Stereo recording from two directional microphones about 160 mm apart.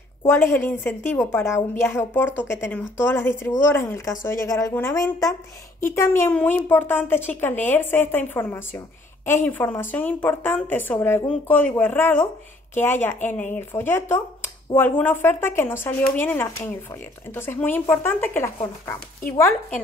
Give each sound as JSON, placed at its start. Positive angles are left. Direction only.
{"t": 0.3, "sound": "a woman's voice", "side_deg": 15}